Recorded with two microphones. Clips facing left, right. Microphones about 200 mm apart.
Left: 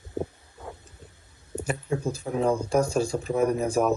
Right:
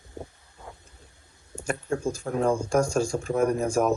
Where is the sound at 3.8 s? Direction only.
Centre (ahead or behind).